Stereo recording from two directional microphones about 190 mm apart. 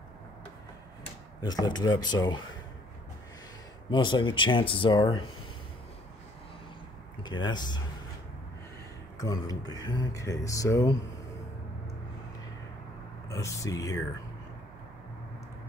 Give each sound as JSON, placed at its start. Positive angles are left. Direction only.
{"t": 1.4, "sound": "speech", "side_deg": 20}
{"t": 3.9, "sound": "speech", "side_deg": 25}
{"t": 7.4, "sound": "speech", "side_deg": 25}
{"t": 9.2, "sound": "speech", "side_deg": 20}
{"t": 13.3, "sound": "speech", "side_deg": 15}